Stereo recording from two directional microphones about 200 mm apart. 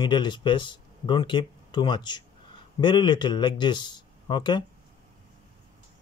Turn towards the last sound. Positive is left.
turn(degrees=20)  # may be behind; listen again after turning